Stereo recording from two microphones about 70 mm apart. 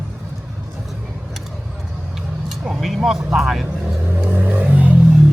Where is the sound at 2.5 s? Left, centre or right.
Centre.